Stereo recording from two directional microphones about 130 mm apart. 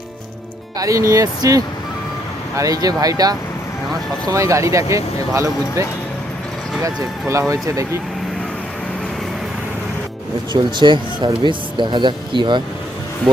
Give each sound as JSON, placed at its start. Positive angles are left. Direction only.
{"t": 0.8, "sound": "speech", "side_deg": -25}
{"t": 6.8, "sound": "speech", "side_deg": -25}
{"t": 10.5, "sound": "speech", "side_deg": -35}